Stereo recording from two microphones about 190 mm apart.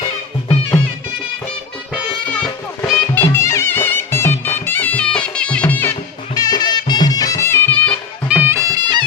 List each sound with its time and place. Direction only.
2.3 s music: 5° left (ahead or behind)
6.3 s music: 20° left (ahead or behind)
8.3 s music: 10° right (ahead or behind)